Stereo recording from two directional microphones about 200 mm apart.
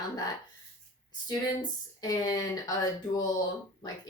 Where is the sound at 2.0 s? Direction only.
20° left (ahead or behind).